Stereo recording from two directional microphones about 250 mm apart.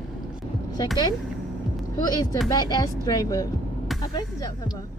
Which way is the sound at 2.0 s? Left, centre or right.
Centre.